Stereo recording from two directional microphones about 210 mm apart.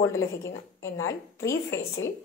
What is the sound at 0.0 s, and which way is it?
A woman's voice, 15° left (ahead or behind).